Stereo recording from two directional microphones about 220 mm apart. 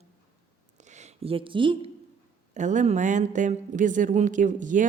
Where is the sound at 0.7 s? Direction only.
30° right (ahead or behind).